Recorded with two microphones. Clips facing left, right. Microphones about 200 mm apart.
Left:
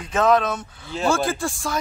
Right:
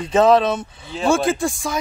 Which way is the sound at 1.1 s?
20° right (ahead or behind).